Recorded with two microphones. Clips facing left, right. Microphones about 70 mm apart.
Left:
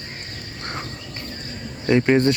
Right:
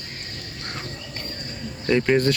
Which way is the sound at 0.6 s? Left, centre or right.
Left.